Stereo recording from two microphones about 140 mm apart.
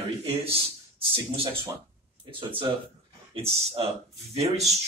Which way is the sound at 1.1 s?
40° right (ahead or behind).